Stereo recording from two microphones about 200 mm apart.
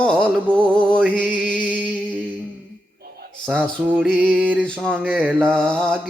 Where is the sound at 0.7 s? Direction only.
5° left (ahead or behind).